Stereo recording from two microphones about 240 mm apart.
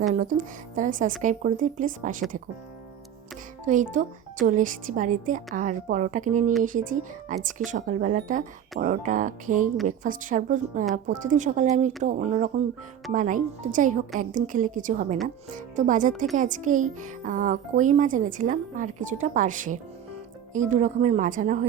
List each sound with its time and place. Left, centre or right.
0.0 s a child's voice: right
3.7 s a child's voice: right